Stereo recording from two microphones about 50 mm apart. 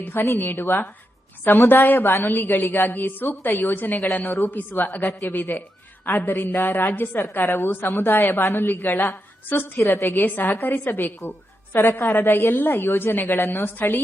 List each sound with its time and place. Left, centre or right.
0.0 s a woman's voice: left
2.0 s a woman's voice: left
2.6 s a woman's voice: left
9.8 s a woman's voice: left
10.2 s a woman's voice: left